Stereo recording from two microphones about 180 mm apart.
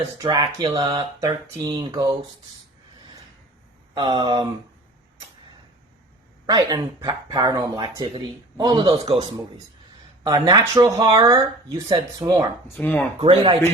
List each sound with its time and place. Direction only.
0.2 s speech: 20° right (ahead or behind)
3.9 s speech: 25° right (ahead or behind)
6.4 s speech: 25° right (ahead or behind)
10.2 s speech: 20° right (ahead or behind)
12.8 s speech: 10° left (ahead or behind)
13.1 s speech: 30° right (ahead or behind)